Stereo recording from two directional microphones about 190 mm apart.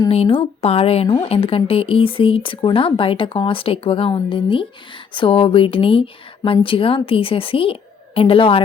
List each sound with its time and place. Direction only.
0.1 s speech: 30° left (ahead or behind)